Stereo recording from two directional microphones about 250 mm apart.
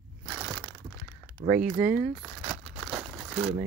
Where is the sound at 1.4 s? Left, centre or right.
Right.